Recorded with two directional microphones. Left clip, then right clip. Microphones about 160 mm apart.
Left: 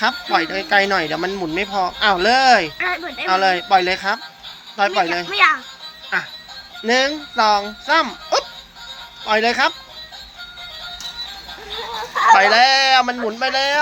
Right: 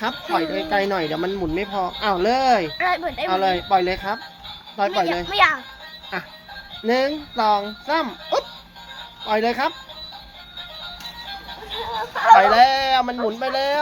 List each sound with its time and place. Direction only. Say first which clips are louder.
0.0 s speech: left 5 dB; 5° right (ahead or behind)
2.7 s speech: right 1 dB; 90° right
3.2 s speech: left 4 dB; 10° right (ahead or behind)
5.3 s speech: left 2 dB; 90° right
6.1 s speech: left 8 dB; 10° right (ahead or behind)
12.3 s speech: even; 15° right (ahead or behind)